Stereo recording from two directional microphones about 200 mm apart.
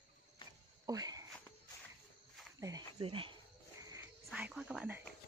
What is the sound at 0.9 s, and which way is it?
Speech, 20° right (ahead or behind).